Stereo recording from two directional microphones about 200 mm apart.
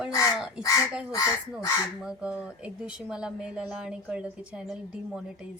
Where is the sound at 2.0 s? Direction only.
5° right (ahead or behind).